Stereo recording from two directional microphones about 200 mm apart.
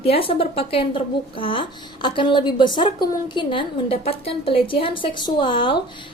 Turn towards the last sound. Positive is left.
turn(degrees=25)  # may be behind; listen again after turning